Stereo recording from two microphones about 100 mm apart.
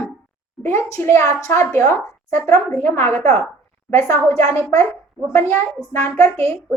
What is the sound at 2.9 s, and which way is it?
A woman's voice, 25° left (ahead or behind).